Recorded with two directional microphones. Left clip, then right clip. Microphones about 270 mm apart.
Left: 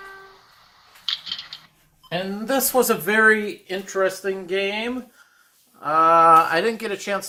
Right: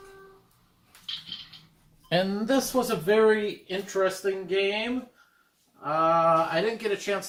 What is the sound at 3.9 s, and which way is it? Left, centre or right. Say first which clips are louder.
Speech: left 4 dB; left.